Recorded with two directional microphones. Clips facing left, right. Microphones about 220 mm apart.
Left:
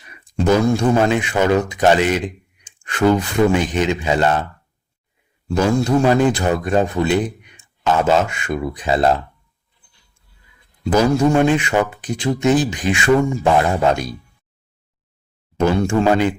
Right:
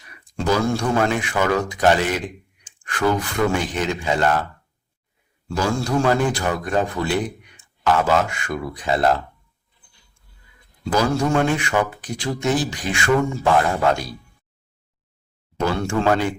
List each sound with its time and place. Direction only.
0.1 s speech: 20° left (ahead or behind)
5.5 s speech: 20° left (ahead or behind)
10.8 s speech: 20° left (ahead or behind)
15.5 s speech: 20° left (ahead or behind)